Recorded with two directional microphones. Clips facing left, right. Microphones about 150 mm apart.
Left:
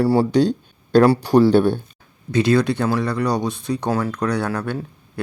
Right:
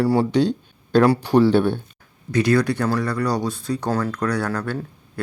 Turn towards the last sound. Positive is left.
turn(degrees=20)  # may be behind; listen again after turning